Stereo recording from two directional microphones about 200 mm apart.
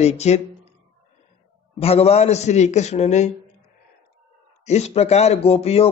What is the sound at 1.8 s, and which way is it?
Speech, 30° left (ahead or behind).